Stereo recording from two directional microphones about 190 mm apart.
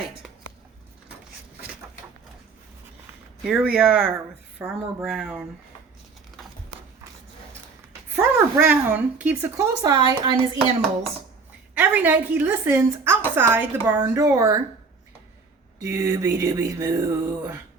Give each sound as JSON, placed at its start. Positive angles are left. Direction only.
{"t": 3.4, "sound": "speech", "side_deg": -5}
{"t": 8.1, "sound": "a woman's voice", "side_deg": -5}
{"t": 9.8, "sound": "a woman's voice", "side_deg": -20}
{"t": 11.7, "sound": "speech", "side_deg": -10}
{"t": 15.8, "sound": "speech", "side_deg": -15}